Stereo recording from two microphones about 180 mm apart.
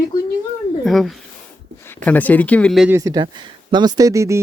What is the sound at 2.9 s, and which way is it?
Speech, 20° right (ahead or behind).